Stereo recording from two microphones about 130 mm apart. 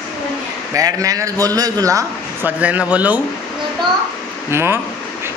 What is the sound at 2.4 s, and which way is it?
Speech, 10° right (ahead or behind).